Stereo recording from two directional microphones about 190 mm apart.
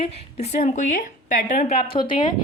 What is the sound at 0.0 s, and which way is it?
A woman's voice, 35° left (ahead or behind).